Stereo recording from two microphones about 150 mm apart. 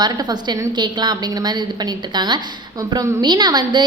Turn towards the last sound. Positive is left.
turn(degrees=-30)  # may be behind; listen again after turning